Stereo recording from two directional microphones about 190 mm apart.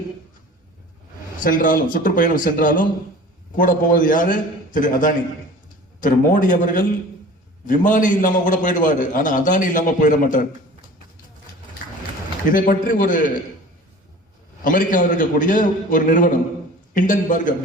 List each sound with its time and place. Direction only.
1.5 s a man's voice: 45° left (ahead or behind)
12.5 s a man's voice: 45° left (ahead or behind)
14.6 s a man's voice: 45° left (ahead or behind)